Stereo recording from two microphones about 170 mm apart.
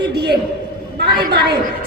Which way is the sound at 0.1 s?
75° right (ahead or behind).